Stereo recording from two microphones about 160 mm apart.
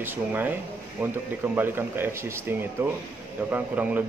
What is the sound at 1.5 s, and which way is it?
Speech, 15° right (ahead or behind).